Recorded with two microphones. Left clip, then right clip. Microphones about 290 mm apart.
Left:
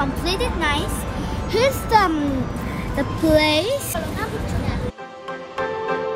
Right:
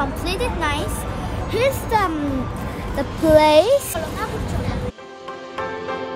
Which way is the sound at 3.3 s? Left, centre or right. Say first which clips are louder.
Right 6 dB; centre.